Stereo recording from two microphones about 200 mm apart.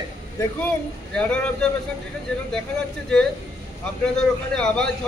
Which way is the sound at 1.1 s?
5° left (ahead or behind).